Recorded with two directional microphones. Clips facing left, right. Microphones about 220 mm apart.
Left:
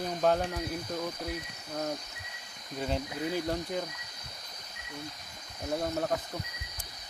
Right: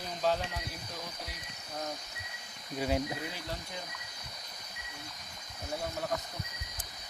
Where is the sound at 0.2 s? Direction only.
55° left (ahead or behind).